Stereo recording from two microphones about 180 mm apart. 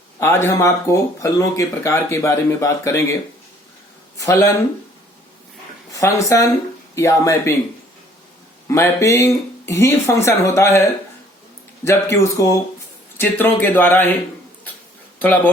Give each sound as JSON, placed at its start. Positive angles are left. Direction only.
{"t": 0.2, "sound": "speech", "side_deg": 15}
{"t": 4.2, "sound": "speech", "side_deg": 20}
{"t": 5.9, "sound": "speech", "side_deg": 15}
{"t": 8.7, "sound": "speech", "side_deg": 15}
{"t": 11.9, "sound": "speech", "side_deg": 15}